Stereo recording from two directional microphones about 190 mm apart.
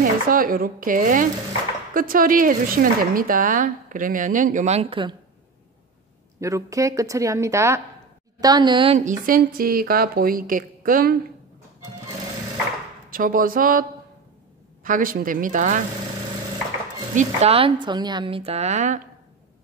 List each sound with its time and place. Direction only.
0.0 s speech: 45° right (ahead or behind); by 5.1 s 30° right (ahead or behind)
6.4 s a woman's voice: 15° right (ahead or behind)
9.0 s speech: 45° right (ahead or behind)
13.1 s speech: 45° right (ahead or behind)
17.1 s a woman's voice: 40° right (ahead or behind)